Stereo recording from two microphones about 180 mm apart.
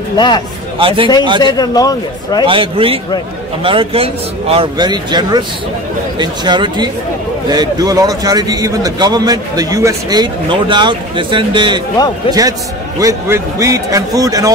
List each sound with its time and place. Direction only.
0.7 s speech: 30° right (ahead or behind)
1.4 s a man's voice: 20° left (ahead or behind)
2.4 s a man's voice: 30° right (ahead or behind)